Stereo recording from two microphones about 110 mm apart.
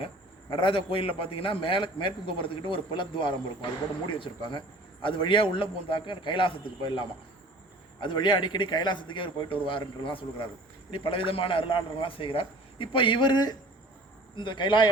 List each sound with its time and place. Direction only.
0.5 s a man's voice: 50° left (ahead or behind)